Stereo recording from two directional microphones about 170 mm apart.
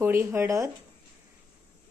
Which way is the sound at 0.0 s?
15° right (ahead or behind).